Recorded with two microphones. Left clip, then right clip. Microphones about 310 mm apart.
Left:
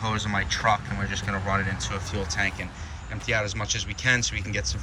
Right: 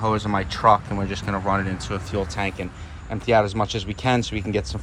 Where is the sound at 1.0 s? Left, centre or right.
Centre.